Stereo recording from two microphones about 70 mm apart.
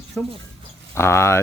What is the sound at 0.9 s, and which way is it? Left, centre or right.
Speech, left.